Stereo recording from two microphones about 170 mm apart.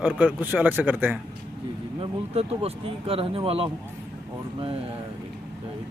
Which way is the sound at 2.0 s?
35° right (ahead or behind).